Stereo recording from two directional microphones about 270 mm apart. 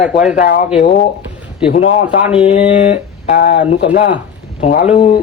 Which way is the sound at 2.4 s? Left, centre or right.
Left.